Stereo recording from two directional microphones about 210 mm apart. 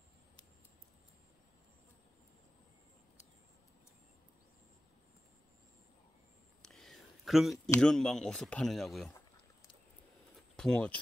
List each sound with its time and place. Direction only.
6.6 s a sound: centre (ahead or behind)
7.7 s speech: 5° left (ahead or behind)
10.5 s speech: 5° left (ahead or behind)